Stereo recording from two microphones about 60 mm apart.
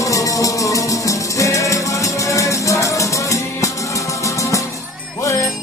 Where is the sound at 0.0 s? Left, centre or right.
Left.